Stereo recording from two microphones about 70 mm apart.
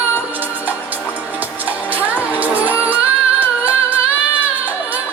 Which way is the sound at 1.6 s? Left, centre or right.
Right.